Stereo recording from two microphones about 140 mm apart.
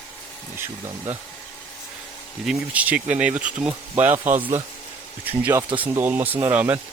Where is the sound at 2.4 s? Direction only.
10° right (ahead or behind).